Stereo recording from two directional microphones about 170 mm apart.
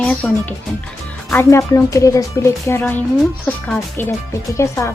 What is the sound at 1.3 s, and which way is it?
Speech, 15° left (ahead or behind).